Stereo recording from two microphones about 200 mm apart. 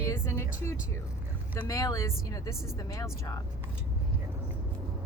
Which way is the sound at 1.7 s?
15° left (ahead or behind).